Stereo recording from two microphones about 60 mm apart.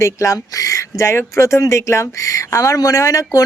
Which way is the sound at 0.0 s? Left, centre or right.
Left.